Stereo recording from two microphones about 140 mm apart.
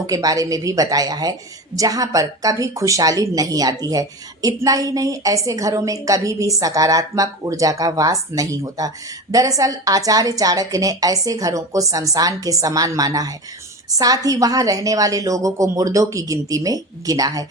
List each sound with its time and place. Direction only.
0.1 s a woman's voice: 25° right (ahead or behind)